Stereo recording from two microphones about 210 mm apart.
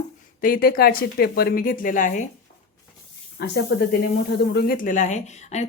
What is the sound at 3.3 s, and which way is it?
Speech, 50° left (ahead or behind).